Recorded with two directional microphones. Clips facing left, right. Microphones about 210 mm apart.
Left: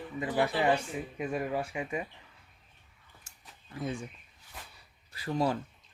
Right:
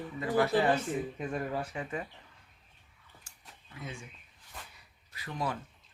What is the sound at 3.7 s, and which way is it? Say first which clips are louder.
Speech: left 8 dB; 35° left (ahead or behind).